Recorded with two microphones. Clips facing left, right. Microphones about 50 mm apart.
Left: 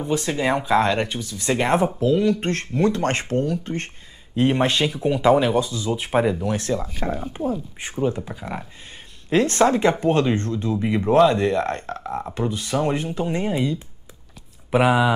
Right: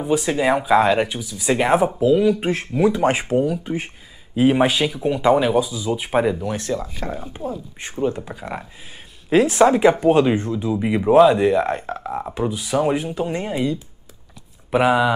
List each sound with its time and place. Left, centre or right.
0.0 s speech: centre
6.9 s speech: left
8.0 s speech: centre